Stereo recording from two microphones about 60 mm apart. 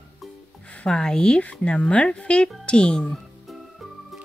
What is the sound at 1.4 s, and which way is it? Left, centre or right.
Speech, left.